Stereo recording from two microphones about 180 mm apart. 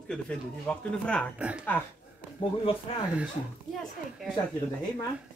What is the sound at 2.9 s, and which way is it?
Speech, 30° left (ahead or behind).